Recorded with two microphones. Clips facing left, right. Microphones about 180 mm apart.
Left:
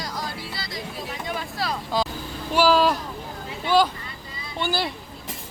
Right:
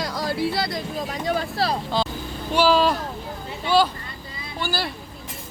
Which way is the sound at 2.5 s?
10° left (ahead or behind).